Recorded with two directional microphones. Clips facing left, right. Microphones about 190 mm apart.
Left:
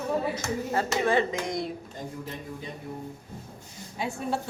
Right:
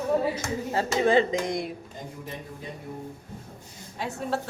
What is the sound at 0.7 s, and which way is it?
Speech, 20° right (ahead or behind).